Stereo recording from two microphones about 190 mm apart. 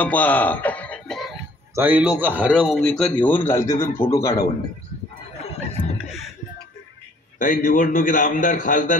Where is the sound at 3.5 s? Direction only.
15° left (ahead or behind).